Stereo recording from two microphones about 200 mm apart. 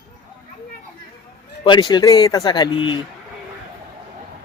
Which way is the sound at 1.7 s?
20° left (ahead or behind).